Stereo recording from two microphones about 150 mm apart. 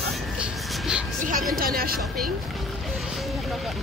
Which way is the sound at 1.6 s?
80° right.